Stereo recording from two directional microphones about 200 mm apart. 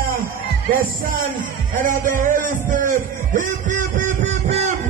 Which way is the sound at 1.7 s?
40° right (ahead or behind).